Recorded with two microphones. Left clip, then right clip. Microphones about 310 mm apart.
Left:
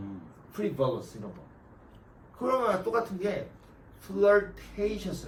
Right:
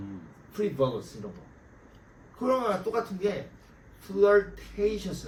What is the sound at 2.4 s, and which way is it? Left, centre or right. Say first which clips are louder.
A man's voice: even; centre.